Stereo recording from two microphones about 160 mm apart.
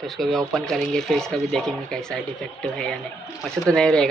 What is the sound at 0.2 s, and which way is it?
Speech, centre (ahead or behind).